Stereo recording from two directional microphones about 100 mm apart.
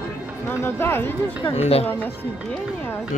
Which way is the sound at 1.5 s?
90° left.